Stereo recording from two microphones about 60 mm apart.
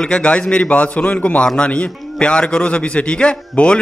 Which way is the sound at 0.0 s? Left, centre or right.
Centre.